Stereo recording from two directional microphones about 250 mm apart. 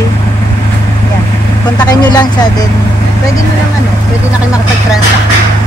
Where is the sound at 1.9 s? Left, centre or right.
Centre.